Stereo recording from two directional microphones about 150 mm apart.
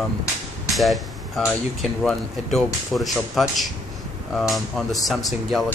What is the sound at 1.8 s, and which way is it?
Speech, centre (ahead or behind).